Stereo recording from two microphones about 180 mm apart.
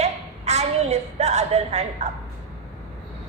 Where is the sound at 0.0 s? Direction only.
35° right (ahead or behind).